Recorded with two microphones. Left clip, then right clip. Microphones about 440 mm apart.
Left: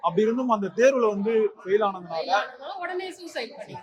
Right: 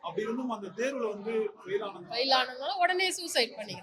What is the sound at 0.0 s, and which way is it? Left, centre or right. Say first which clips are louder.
A man's voice: left 11 dB; left.